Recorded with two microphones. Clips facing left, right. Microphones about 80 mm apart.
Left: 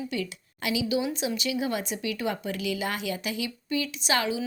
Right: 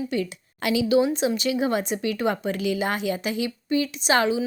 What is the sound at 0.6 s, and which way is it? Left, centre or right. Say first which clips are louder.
A woman's voice: right 7 dB; right.